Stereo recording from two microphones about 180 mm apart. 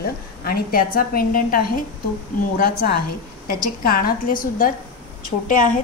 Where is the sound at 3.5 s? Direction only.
55° left (ahead or behind).